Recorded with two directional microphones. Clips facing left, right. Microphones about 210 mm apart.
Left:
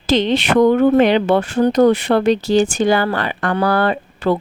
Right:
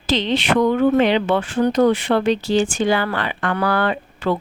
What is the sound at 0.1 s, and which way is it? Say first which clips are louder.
Speech: left 4 dB; 45° left (ahead or behind).